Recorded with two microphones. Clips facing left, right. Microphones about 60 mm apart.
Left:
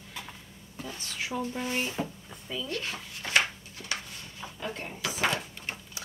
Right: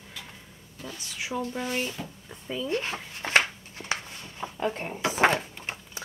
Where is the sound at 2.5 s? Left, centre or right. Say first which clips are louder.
Right 5 dB; right.